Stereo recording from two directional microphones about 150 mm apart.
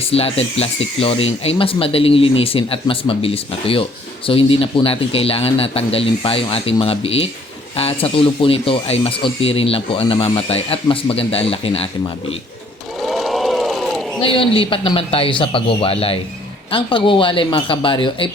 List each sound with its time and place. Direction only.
0.1 s speech: 40° left (ahead or behind)
13.1 s a sound: centre (ahead or behind)
14.2 s speech: 35° left (ahead or behind)